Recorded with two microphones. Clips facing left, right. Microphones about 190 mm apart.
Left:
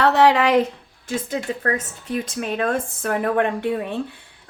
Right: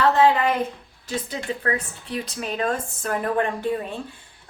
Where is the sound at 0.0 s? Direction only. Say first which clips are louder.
Left 2 dB; 75° left (ahead or behind).